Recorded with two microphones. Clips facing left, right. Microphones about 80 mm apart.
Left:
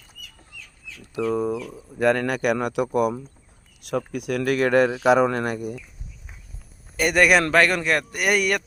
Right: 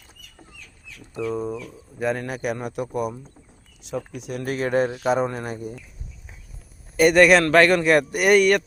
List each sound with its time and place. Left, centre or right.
1.1 s a man's voice: left
3.8 s speech: left
6.9 s a man's voice: centre